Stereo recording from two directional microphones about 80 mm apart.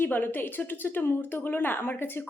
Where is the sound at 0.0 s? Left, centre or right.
Left.